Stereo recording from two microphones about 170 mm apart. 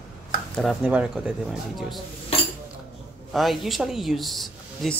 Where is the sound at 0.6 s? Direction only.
5° right (ahead or behind).